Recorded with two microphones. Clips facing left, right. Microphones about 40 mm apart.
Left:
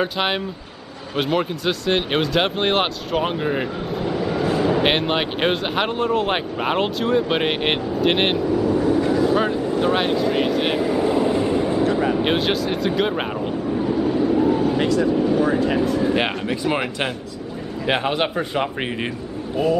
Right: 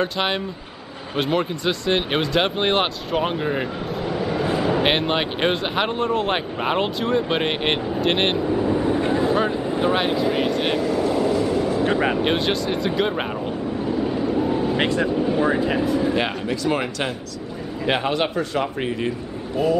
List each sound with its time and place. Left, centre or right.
0.0 s a man's voice: centre
8.4 s vehicle: right
9.3 s a sound: centre
9.6 s a sound: right
9.9 s speech: centre
10.8 s vehicle: centre
11.8 s vehicle: right
12.2 s speech: centre
14.0 s vehicle: centre
14.8 s speech: right
15.2 s speech: right
15.7 s speech: centre
16.2 s a man's voice: centre
19.5 s speech: centre